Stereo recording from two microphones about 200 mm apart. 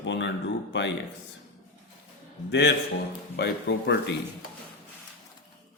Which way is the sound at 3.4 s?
60° left (ahead or behind).